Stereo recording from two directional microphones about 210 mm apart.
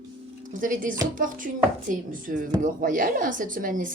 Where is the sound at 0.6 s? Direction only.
40° right (ahead or behind).